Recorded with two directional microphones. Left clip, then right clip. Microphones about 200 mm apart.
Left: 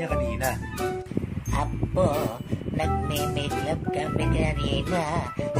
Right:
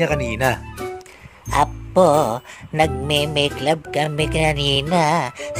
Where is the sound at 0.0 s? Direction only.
60° right (ahead or behind).